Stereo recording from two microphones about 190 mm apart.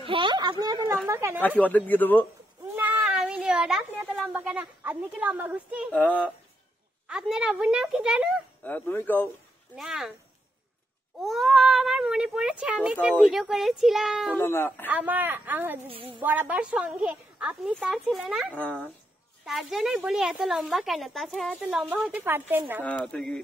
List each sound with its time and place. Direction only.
0.0 s a woman's voice: 25° right (ahead or behind)
1.6 s speech: 10° left (ahead or behind)
2.7 s cat: 5° right (ahead or behind)
4.2 s a woman's voice: 5° right (ahead or behind)
5.9 s speech: 5° left (ahead or behind)
7.1 s a woman's voice: 5° right (ahead or behind)
8.6 s speech: 10° left (ahead or behind)
9.8 s a woman's voice: centre (ahead or behind)
11.1 s a woman's voice: centre (ahead or behind)
14.3 s speech: 10° left (ahead or behind)
14.9 s a woman's voice: 10° right (ahead or behind)
15.9 s a woman's voice: 30° right (ahead or behind)
16.2 s a woman's voice: 10° right (ahead or behind)
22.8 s a woman's voice: 5° left (ahead or behind)